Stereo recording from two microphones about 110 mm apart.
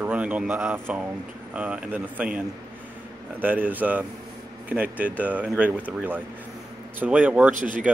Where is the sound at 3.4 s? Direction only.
15° right (ahead or behind).